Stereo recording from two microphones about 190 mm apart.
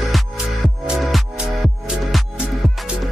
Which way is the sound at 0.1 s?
Centre (ahead or behind).